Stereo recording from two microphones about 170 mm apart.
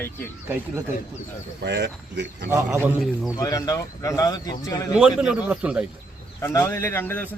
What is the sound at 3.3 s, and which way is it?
Speech, 20° left (ahead or behind).